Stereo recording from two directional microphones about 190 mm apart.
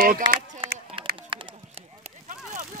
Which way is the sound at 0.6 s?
25° right (ahead or behind).